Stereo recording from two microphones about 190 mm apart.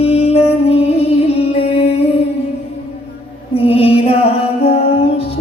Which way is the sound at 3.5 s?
30° left (ahead or behind).